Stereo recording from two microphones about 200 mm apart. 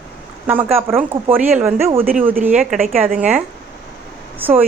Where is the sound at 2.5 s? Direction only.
40° right (ahead or behind).